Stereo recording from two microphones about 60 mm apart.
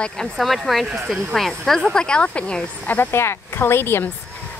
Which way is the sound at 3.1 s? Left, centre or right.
Left.